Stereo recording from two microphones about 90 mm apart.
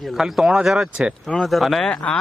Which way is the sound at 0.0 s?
Centre (ahead or behind).